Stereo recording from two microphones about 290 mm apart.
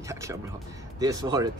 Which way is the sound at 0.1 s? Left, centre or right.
Centre.